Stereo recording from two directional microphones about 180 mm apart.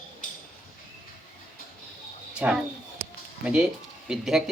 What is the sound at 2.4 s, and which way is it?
Speech, 5° right (ahead or behind).